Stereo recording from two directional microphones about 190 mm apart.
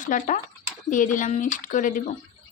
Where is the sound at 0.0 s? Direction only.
45° left (ahead or behind).